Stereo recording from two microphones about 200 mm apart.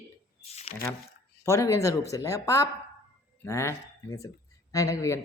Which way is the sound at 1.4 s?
15° left (ahead or behind).